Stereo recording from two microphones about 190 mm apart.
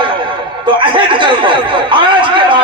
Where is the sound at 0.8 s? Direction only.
25° right (ahead or behind).